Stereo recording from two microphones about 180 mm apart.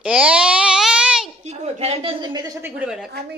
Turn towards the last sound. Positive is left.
turn(degrees=-5)  # may be behind; listen again after turning